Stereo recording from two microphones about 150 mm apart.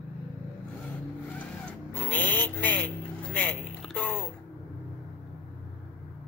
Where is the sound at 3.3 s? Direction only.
10° left (ahead or behind).